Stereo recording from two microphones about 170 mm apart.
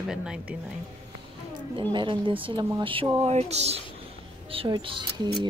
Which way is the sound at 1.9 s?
30° right (ahead or behind).